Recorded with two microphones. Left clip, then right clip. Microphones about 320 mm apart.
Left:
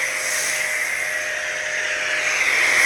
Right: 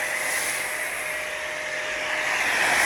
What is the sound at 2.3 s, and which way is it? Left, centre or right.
Vehicle, right.